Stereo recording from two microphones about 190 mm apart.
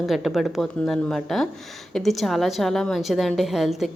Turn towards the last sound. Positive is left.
turn(degrees=0)  # may be behind; listen again after turning